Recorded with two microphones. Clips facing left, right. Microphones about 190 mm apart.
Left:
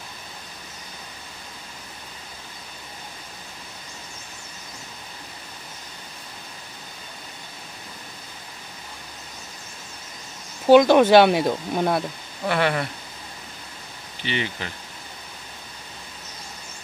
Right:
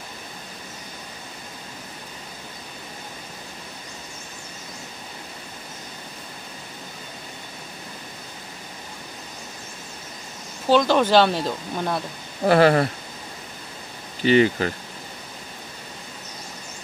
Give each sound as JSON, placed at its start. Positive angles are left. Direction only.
{"t": 10.7, "sound": "speech", "side_deg": 15}
{"t": 12.4, "sound": "speech", "side_deg": -35}
{"t": 14.2, "sound": "speech", "side_deg": -45}